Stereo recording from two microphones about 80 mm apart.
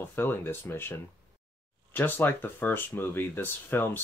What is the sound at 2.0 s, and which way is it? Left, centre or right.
Speech, left.